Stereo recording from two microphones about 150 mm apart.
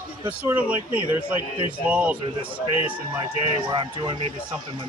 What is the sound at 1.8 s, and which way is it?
Speech, 10° right (ahead or behind).